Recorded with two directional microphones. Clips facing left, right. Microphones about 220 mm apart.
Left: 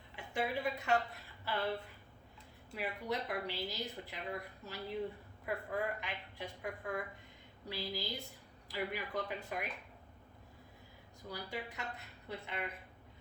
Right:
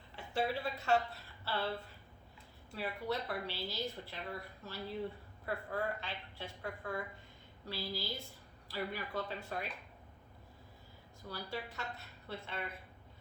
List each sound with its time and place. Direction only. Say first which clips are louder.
0.3 s a woman's voice: even; 15° left (ahead or behind)
2.7 s a woman's voice: right 1 dB; 15° left (ahead or behind)
11.3 s a woman's voice: even; 15° left (ahead or behind)